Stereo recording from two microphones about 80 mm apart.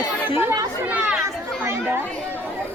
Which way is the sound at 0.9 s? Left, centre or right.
Centre.